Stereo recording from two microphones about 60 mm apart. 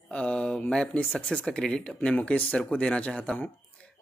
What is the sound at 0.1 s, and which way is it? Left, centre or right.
Mantra, centre.